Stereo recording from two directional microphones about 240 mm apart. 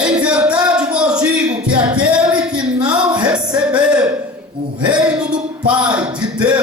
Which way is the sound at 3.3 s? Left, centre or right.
Centre.